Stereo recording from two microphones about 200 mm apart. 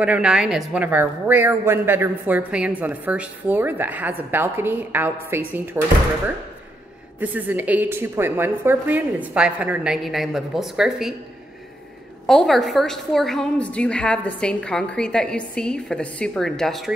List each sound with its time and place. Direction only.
0.0 s speech: 5° right (ahead or behind)
7.2 s speech: 10° right (ahead or behind)
12.3 s a woman's voice: centre (ahead or behind)